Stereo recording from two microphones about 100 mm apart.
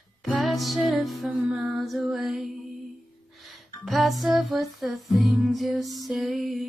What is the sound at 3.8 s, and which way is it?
Music, centre (ahead or behind).